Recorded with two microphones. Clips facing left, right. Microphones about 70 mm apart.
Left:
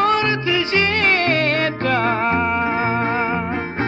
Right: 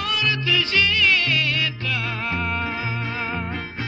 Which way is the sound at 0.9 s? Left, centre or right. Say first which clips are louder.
Left 4 dB; left.